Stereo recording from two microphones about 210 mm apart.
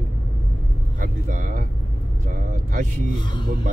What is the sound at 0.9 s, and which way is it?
Speech, 40° right (ahead or behind).